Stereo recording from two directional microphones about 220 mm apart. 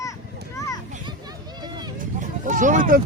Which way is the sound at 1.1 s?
20° right (ahead or behind).